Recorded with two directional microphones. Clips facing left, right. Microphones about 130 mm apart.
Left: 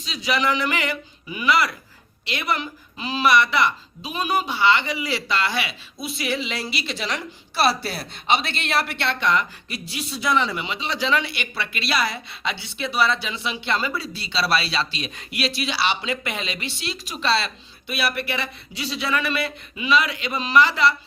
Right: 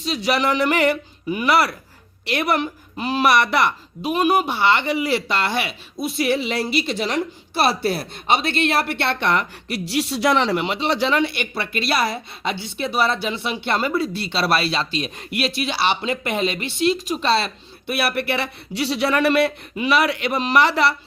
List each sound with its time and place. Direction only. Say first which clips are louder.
0.0 s a woman's voice: right 3 dB; 60° right (ahead or behind)
11.1 s a woman's voice: right 3 dB; 50° right (ahead or behind); by 20.9 s 65° right (ahead or behind)